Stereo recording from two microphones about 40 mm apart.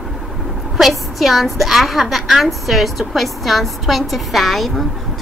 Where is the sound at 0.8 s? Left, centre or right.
Centre.